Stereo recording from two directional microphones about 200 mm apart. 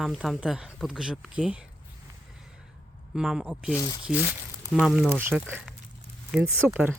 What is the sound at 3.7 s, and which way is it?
Speech, 20° left (ahead or behind).